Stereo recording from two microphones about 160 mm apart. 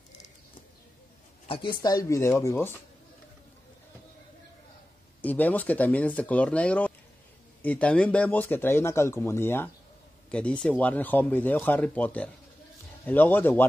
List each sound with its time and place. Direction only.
1.5 s speech: 30° left (ahead or behind); by 2.8 s 15° left (ahead or behind)
5.2 s speech: 10° left (ahead or behind)